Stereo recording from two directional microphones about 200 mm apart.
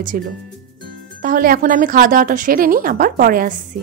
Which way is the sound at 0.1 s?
45° right (ahead or behind).